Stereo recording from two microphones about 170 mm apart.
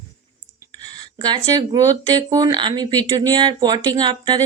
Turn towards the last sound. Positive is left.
turn(degrees=-25)  # may be behind; listen again after turning